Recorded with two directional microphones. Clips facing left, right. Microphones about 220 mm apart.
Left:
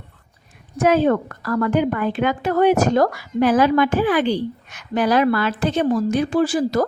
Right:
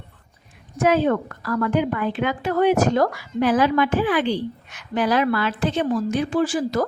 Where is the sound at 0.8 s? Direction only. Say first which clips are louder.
Left 2 dB; 45° left (ahead or behind).